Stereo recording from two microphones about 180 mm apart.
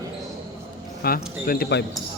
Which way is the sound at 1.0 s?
55° left (ahead or behind).